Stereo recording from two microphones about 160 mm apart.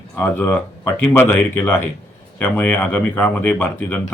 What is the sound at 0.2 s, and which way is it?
Speech, 10° left (ahead or behind).